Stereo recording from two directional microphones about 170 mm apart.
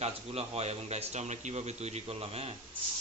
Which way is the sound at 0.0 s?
40° right (ahead or behind).